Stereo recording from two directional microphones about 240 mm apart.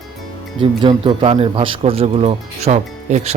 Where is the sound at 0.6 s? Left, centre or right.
Right.